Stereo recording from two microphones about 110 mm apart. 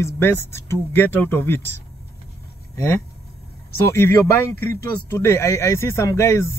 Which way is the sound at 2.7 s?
25° left (ahead or behind).